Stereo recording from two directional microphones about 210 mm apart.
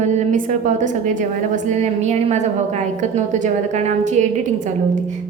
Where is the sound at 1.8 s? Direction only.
30° right (ahead or behind).